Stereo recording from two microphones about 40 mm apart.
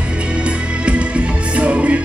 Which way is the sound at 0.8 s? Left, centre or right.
Right.